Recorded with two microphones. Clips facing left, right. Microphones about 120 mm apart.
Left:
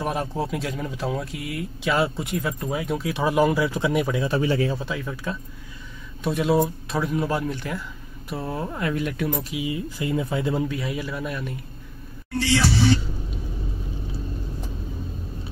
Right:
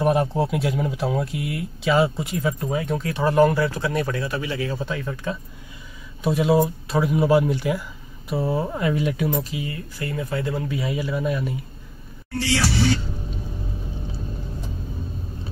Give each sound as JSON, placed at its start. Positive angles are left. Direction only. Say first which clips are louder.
{"t": 0.0, "sound": "speech", "louder": "right 6 dB", "side_deg": -5}
{"t": 4.3, "sound": "speech", "louder": "left 4 dB", "side_deg": 35}
{"t": 4.7, "sound": "speech", "louder": "right 2 dB", "side_deg": 0}
{"t": 9.7, "sound": "speech", "louder": "left 4 dB", "side_deg": 15}
{"t": 10.7, "sound": "speech", "louder": "right 3 dB", "side_deg": 0}